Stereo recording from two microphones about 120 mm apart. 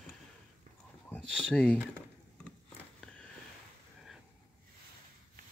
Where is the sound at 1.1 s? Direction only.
5° left (ahead or behind).